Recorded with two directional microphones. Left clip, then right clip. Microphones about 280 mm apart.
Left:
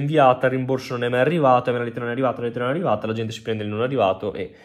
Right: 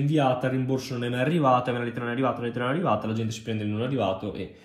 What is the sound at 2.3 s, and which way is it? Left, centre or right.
Speech, centre.